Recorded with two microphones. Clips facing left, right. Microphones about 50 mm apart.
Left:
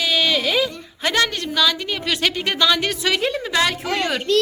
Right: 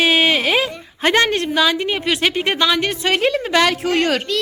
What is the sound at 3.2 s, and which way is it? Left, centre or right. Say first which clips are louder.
Speech: right 8 dB; right.